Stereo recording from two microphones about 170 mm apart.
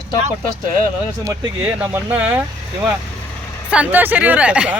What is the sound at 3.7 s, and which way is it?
Speech, 10° right (ahead or behind).